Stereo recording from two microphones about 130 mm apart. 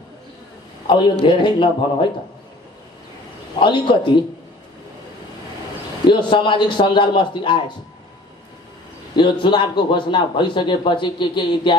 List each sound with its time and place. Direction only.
0.8 s a man's voice: 35° left (ahead or behind)
3.5 s a man's voice: 40° left (ahead or behind)
6.0 s a man's voice: 40° left (ahead or behind)
9.1 s a man's voice: 40° left (ahead or behind)